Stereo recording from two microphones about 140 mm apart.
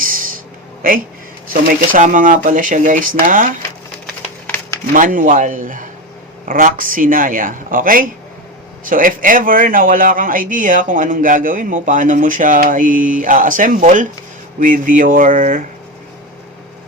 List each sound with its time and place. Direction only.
1.6 s speech: 75° right (ahead or behind)
4.0 s a sound: 10° left (ahead or behind)
4.9 s speech: 70° right (ahead or behind)